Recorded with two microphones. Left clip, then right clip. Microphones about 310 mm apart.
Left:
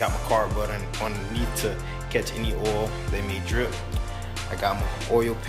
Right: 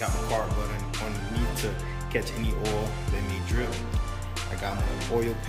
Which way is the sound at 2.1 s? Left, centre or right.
Centre.